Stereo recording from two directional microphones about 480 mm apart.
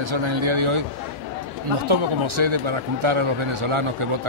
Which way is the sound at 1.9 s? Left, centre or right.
Right.